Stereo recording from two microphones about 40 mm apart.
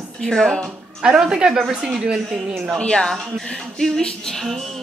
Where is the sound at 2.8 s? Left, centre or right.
Left.